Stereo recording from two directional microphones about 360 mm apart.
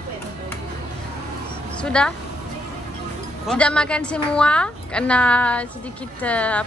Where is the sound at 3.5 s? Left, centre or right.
Centre.